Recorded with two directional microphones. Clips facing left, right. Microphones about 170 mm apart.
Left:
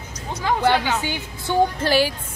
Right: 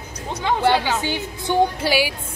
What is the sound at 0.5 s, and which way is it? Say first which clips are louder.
A woman's voice: right 1 dB; 15° right (ahead or behind).